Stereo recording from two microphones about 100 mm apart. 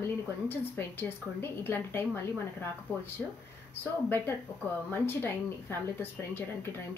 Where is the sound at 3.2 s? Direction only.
10° left (ahead or behind).